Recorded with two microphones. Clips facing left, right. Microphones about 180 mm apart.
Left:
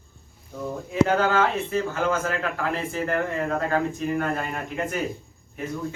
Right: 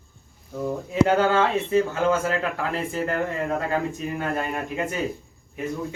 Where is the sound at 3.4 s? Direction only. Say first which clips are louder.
Even; 15° right (ahead or behind).